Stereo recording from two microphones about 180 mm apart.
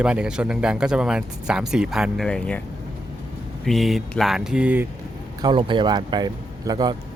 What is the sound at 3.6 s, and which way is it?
A man's voice, centre (ahead or behind).